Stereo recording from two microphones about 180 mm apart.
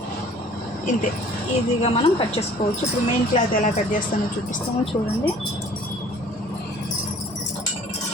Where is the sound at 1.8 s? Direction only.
30° left (ahead or behind).